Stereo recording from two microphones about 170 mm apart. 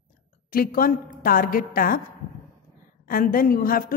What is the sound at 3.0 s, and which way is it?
Speech, 55° left (ahead or behind).